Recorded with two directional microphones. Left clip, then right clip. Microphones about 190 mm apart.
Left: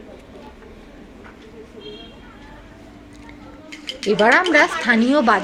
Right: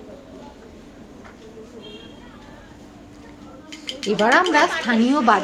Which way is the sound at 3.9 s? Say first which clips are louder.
Left 4 dB; 55° left (ahead or behind).